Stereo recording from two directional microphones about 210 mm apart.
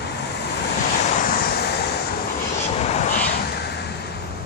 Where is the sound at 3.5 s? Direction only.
50° left (ahead or behind).